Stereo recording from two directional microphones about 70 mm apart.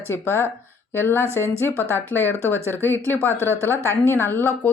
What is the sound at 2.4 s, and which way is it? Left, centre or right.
Speech, right.